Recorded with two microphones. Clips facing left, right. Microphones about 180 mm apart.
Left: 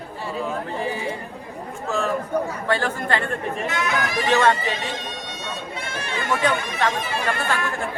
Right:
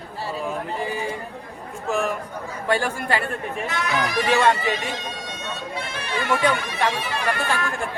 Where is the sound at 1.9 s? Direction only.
15° right (ahead or behind).